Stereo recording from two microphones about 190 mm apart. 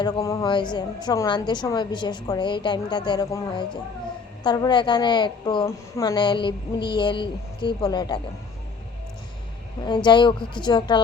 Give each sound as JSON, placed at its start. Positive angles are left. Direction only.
{"t": 0.0, "sound": "a woman's voice", "side_deg": 15}
{"t": 9.8, "sound": "a woman's voice", "side_deg": 25}